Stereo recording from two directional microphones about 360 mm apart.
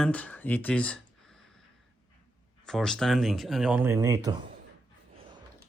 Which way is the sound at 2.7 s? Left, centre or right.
Centre.